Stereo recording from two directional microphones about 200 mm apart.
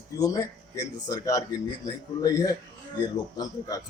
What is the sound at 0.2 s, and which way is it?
A man's voice, 15° left (ahead or behind).